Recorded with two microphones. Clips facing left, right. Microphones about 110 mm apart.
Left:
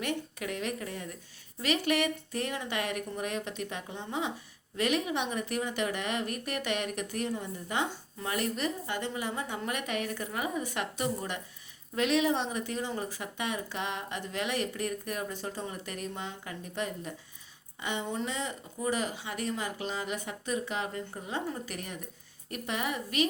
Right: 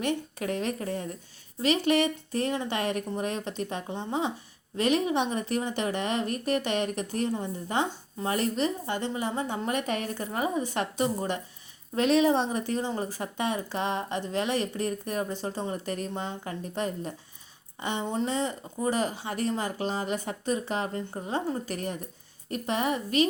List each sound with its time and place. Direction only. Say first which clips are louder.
0.0 s speech: right 5 dB; 30° right (ahead or behind)